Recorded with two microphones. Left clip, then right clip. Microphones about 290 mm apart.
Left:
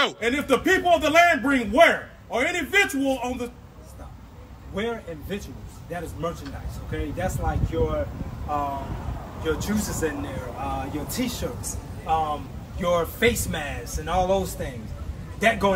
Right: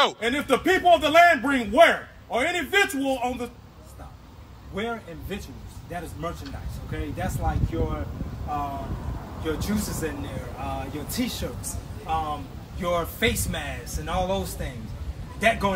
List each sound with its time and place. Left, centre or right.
0.0 s speech: centre
4.7 s a man's voice: centre
9.4 s a man's voice: centre